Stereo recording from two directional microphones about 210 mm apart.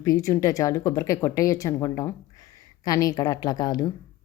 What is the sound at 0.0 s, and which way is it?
Speech, 15° left (ahead or behind).